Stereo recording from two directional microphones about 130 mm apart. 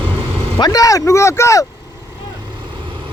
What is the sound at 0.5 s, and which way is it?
Speech, 30° left (ahead or behind).